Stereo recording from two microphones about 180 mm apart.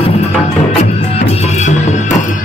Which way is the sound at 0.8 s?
40° left (ahead or behind).